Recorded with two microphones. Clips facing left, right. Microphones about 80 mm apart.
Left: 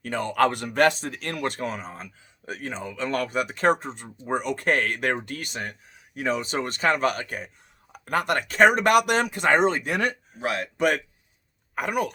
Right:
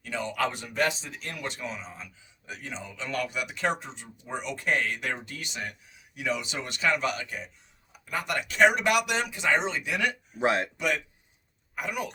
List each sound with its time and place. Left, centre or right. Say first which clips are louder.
0.0 s speech: left 7 dB; left
10.4 s speech: right 3 dB; right
10.8 s speech: left 6 dB; left